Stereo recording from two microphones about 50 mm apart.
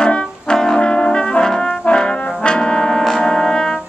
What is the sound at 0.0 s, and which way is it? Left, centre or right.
Brass instrument, centre.